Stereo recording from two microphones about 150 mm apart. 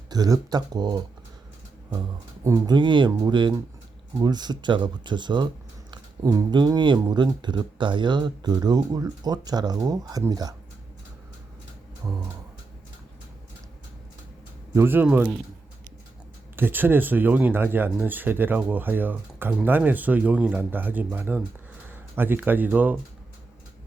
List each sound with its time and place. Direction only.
0.1 s speech: 25° right (ahead or behind)
12.0 s speech: 20° right (ahead or behind)
14.8 s speech: 15° right (ahead or behind)
16.6 s speech: 15° right (ahead or behind)